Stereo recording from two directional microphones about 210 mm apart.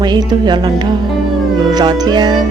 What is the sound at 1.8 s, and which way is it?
Speech, 20° right (ahead or behind).